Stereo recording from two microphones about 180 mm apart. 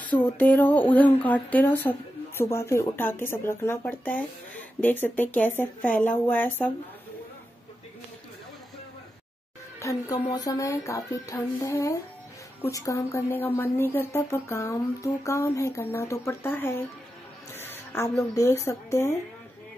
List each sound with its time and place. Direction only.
0.2 s speech: 10° left (ahead or behind)
9.8 s a woman's voice: 15° left (ahead or behind)
17.6 s music: 15° left (ahead or behind)
18.3 s speech: 15° left (ahead or behind)